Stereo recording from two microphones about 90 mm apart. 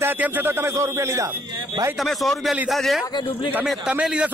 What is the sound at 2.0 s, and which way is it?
A man's voice, centre (ahead or behind).